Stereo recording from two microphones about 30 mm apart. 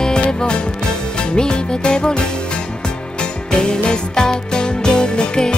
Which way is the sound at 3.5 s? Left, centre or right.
Left.